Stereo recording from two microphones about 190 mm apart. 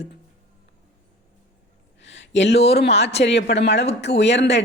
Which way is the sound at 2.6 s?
60° left (ahead or behind).